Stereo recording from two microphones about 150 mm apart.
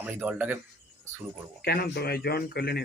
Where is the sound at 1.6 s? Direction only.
90° left.